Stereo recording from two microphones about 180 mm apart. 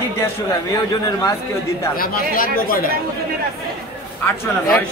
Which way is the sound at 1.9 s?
55° left (ahead or behind).